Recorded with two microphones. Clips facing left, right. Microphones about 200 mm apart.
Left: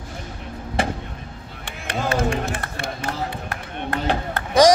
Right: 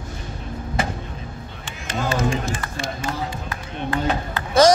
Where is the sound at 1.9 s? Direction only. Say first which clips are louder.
Even; 60° left (ahead or behind).